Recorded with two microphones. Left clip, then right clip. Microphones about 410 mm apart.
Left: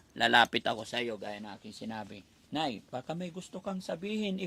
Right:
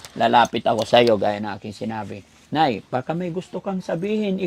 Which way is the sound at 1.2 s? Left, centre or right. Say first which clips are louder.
Right 19 dB; right.